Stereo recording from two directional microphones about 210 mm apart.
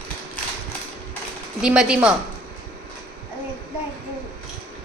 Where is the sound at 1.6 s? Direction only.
5° right (ahead or behind).